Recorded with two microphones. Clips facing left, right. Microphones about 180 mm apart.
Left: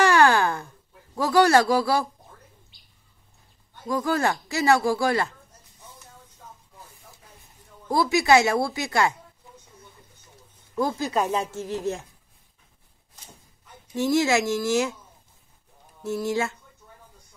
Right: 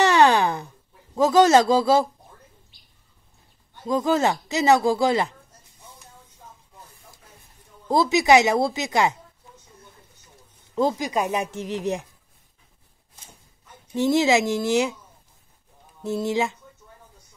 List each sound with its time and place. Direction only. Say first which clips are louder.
0.0 s a sound: right 1 dB; 20° right (ahead or behind)
1.1 s speech: right 3 dB; 20° right (ahead or behind)
3.8 s speech: right 3 dB; 20° right (ahead or behind)
7.9 s speech: right 2 dB; 20° right (ahead or behind)
10.7 s speech: right 2 dB; 25° right (ahead or behind)
13.9 s speech: right 2 dB; 20° right (ahead or behind)
16.0 s speech: right 2 dB; 20° right (ahead or behind)